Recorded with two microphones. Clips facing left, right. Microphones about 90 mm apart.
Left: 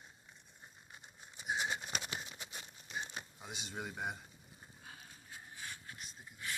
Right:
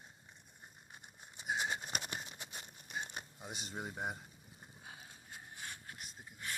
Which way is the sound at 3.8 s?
40° right (ahead or behind).